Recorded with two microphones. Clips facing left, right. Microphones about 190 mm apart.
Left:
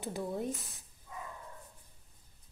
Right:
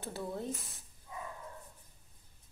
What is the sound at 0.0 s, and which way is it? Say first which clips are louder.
Speech: left 3 dB; 15° left (ahead or behind).